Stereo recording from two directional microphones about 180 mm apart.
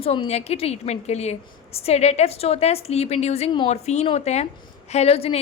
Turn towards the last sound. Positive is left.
turn(degrees=35)  # may be behind; listen again after turning